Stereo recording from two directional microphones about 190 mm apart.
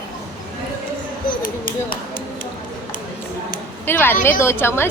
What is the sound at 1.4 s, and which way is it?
Chop, 45° left (ahead or behind).